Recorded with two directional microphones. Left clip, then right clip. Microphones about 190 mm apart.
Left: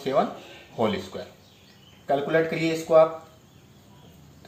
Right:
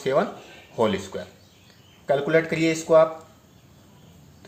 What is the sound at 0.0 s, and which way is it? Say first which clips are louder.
Speech: right 1 dB; 55° right (ahead or behind).